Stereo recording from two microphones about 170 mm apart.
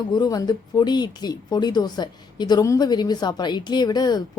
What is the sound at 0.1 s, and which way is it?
Speech, 25° left (ahead or behind).